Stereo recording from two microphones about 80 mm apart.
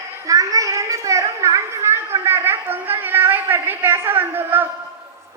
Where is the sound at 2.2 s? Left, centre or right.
Right.